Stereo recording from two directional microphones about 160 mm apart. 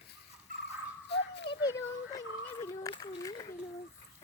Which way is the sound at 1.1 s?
90° left.